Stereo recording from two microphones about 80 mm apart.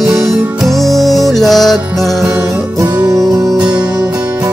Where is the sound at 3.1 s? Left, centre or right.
Right.